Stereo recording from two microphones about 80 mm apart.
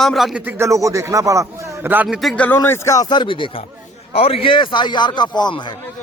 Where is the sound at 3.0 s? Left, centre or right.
Left.